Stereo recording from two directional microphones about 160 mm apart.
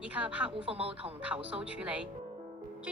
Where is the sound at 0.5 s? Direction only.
35° right (ahead or behind).